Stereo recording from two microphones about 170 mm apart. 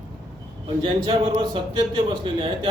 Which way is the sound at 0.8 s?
30° right (ahead or behind).